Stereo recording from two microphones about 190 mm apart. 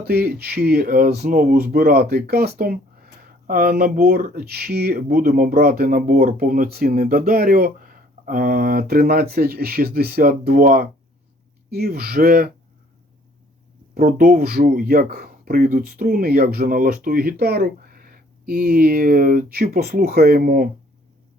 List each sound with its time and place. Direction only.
0.0 s speech: 55° right (ahead or behind)
13.9 s speech: 45° right (ahead or behind)